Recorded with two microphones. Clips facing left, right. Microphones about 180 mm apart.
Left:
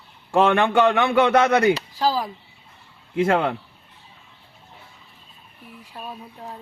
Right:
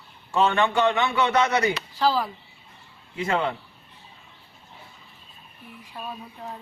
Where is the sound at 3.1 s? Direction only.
55° left (ahead or behind).